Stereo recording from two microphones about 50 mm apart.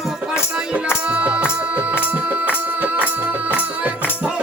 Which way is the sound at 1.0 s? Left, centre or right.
Right.